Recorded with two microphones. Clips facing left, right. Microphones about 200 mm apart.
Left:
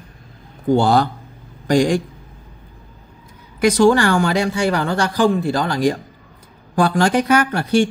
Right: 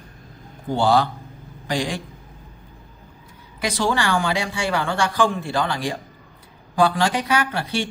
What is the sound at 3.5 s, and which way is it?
Speech, 45° left (ahead or behind).